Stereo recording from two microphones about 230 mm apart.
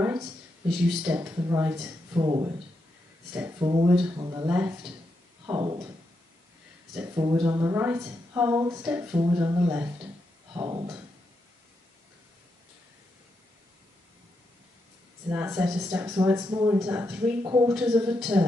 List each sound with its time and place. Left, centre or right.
0.0 s a woman's voice: centre
3.5 s a woman's voice: centre
7.2 s a woman's voice: centre
15.2 s a woman's voice: centre
17.4 s a woman's voice: centre
17.7 s a woman's voice: centre